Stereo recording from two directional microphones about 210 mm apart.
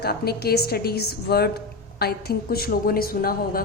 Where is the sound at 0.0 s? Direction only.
50° left (ahead or behind).